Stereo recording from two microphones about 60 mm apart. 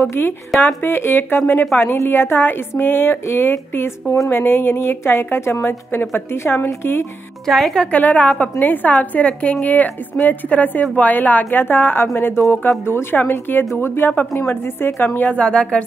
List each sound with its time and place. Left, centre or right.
0.0 s a woman's voice: left
7.4 s speech: centre
7.8 s a woman's voice: left
15.1 s speech: left